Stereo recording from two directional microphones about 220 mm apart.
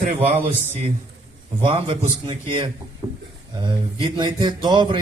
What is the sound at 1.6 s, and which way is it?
A man's voice, 25° right (ahead or behind).